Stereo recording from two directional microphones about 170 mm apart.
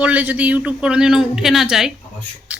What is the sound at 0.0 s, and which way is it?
Speech, 10° right (ahead or behind).